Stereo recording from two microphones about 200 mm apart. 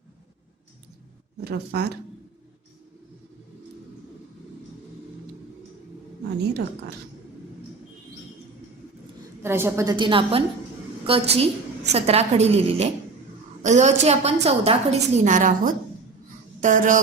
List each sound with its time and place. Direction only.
1.4 s speech: 55° right (ahead or behind)
9.4 s a woman's voice: 10° right (ahead or behind); by 17.0 s 40° right (ahead or behind)